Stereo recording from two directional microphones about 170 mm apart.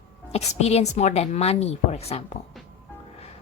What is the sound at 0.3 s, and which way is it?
Speech, 40° left (ahead or behind).